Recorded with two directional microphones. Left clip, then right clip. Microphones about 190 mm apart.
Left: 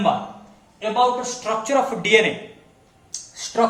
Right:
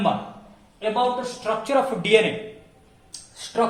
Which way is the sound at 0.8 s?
15° right (ahead or behind).